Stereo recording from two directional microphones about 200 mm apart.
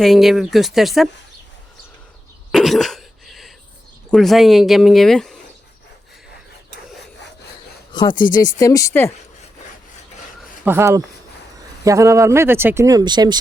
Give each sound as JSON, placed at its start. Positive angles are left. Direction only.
{"t": 0.0, "sound": "speech", "side_deg": 0}
{"t": 2.5, "sound": "cough", "side_deg": 0}
{"t": 4.1, "sound": "speech", "side_deg": 0}
{"t": 8.1, "sound": "speech", "side_deg": 45}
{"t": 8.4, "sound": "speech", "side_deg": 15}
{"t": 10.6, "sound": "speech", "side_deg": -10}